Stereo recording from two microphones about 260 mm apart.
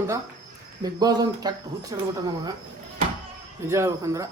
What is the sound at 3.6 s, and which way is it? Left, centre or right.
Speech, centre.